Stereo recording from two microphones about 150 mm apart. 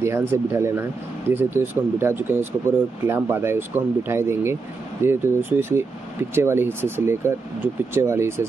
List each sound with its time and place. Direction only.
0.0 s speech: 15° right (ahead or behind)